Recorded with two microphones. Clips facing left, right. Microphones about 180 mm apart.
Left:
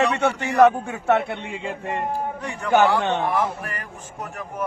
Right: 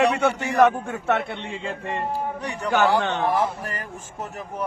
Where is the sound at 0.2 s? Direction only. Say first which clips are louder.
Left 2 dB; centre (ahead or behind).